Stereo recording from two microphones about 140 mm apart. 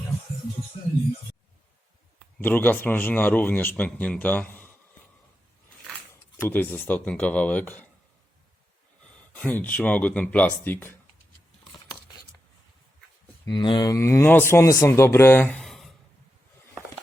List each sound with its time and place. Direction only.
2.4 s a man's voice: 15° left (ahead or behind)
6.4 s a man's voice: 15° left (ahead or behind)
9.3 s a man's voice: 10° left (ahead or behind)
13.5 s speech: 35° left (ahead or behind); by 15.6 s 15° left (ahead or behind)
15.6 s a sound: centre (ahead or behind)